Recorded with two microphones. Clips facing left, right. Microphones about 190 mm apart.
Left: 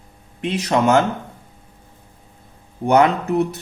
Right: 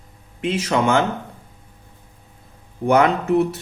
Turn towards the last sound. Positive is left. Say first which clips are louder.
# even
turn(degrees=40)  # may be behind; listen again after turning